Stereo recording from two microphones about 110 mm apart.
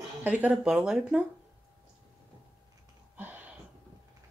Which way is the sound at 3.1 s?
15° right (ahead or behind).